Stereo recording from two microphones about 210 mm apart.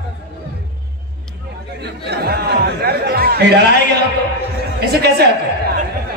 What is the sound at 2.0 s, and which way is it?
A man's voice, 50° right (ahead or behind).